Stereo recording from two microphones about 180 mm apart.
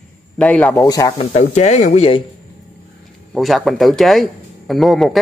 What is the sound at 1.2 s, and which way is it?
Speech, 35° left (ahead or behind).